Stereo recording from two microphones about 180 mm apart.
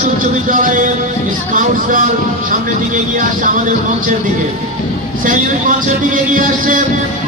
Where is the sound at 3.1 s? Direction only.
45° right (ahead or behind).